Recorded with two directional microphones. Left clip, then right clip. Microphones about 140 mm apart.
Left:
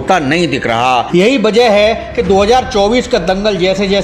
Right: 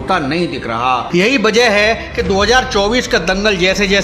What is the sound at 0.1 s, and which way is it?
Speech, 20° left (ahead or behind).